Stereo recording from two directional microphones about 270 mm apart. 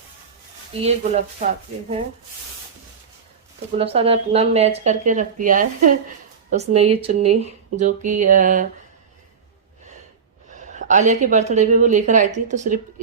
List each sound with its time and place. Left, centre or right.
0.8 s speech: right
3.8 s speech: right
10.5 s speech: right